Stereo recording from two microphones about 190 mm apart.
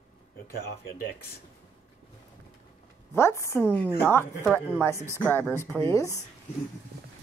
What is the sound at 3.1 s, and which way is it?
A woman's voice, 15° left (ahead or behind).